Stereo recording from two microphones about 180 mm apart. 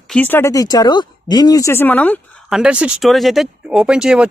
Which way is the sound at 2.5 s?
5° right (ahead or behind).